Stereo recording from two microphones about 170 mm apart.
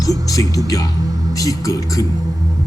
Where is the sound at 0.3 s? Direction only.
20° left (ahead or behind).